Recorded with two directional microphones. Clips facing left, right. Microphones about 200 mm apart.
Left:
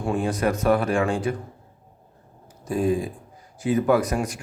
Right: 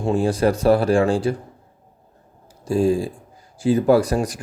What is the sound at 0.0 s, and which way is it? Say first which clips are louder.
Speech: right 5 dB; 30° right (ahead or behind).